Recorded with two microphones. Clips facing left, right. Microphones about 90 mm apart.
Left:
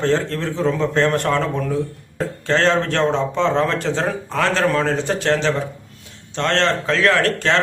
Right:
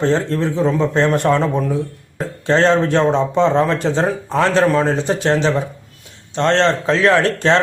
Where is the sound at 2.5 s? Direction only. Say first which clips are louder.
Right 4 dB; 20° right (ahead or behind).